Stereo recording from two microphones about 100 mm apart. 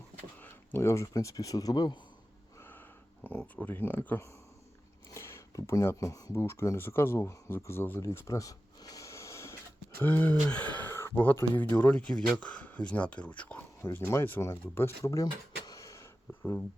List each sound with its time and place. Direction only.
0.3 s a sound: 20° left (ahead or behind)
0.8 s speech: 30° left (ahead or behind)
2.6 s a sound: 20° left (ahead or behind)
3.2 s speech: 15° left (ahead or behind)
10.0 s speech: 15° left (ahead or behind)
13.8 s speech: 25° left (ahead or behind)